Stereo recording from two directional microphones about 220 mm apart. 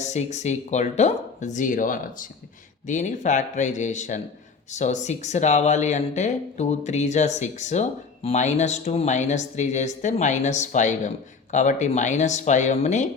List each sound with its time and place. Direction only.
0.0 s speech: 30° left (ahead or behind)